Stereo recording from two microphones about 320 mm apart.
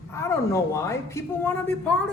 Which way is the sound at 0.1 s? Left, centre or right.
Centre.